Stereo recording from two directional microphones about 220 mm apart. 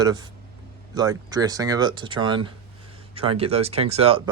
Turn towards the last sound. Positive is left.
turn(degrees=-25)  # may be behind; listen again after turning